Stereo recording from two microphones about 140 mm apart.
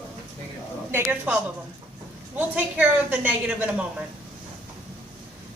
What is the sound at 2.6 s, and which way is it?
A woman's voice, 10° right (ahead or behind).